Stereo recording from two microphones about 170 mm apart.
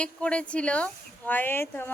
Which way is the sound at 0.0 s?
5° left (ahead or behind).